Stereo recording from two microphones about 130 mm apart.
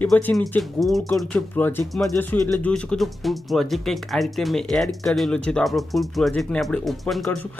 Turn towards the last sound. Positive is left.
turn(degrees=0)  # may be behind; listen again after turning